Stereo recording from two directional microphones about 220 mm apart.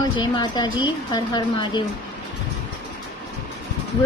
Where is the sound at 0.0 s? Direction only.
20° left (ahead or behind).